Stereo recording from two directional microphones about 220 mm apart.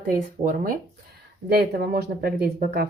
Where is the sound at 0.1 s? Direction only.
40° right (ahead or behind).